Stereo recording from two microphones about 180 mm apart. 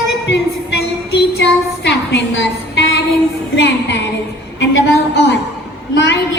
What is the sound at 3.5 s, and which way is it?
Speech, 75° left (ahead or behind).